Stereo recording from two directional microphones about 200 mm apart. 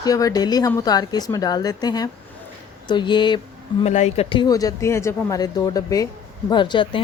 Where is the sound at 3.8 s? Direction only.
35° left (ahead or behind).